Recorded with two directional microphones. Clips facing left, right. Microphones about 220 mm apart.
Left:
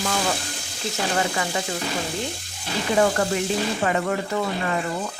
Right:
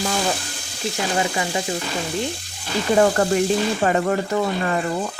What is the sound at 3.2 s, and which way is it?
Speech, 40° right (ahead or behind).